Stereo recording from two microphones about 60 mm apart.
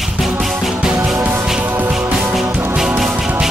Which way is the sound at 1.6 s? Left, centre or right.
Right.